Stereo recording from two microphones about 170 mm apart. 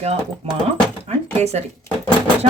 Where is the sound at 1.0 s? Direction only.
40° right (ahead or behind).